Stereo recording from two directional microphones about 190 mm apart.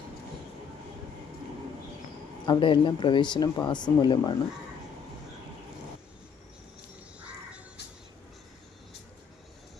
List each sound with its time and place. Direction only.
2.5 s speech: 25° left (ahead or behind)
7.2 s crow: 5° right (ahead or behind)